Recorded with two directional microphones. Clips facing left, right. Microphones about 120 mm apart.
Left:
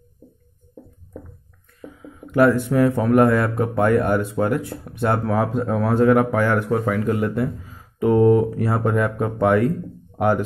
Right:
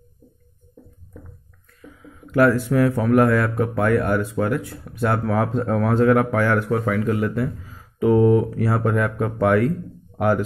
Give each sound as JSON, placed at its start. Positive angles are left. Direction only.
{"t": 2.0, "sound": "speech", "side_deg": 20}